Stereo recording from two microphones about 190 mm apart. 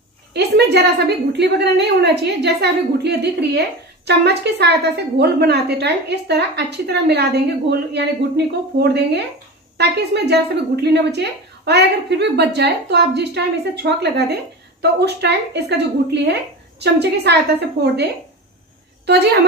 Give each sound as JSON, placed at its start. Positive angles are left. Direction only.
{"t": 0.3, "sound": "a woman's voice", "side_deg": -60}